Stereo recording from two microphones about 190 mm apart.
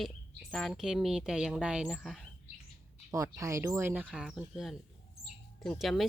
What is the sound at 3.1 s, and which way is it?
Speech, 15° right (ahead or behind).